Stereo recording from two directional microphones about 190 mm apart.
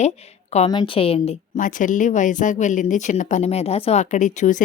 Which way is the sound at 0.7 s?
25° left (ahead or behind).